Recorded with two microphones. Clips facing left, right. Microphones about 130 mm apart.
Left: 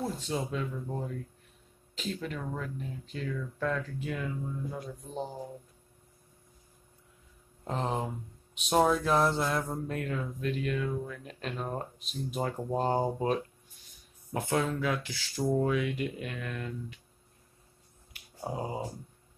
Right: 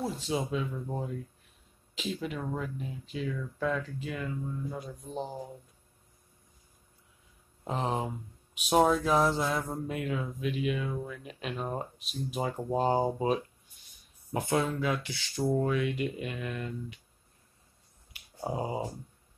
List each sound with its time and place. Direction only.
0.0 s speech: 5° right (ahead or behind)
7.6 s speech: 5° right (ahead or behind)
18.4 s speech: 10° right (ahead or behind)